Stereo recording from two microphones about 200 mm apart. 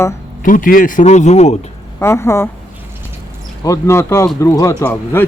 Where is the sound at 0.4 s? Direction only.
45° left (ahead or behind).